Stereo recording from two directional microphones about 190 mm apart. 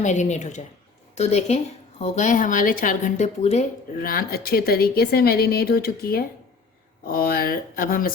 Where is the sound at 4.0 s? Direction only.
50° left (ahead or behind).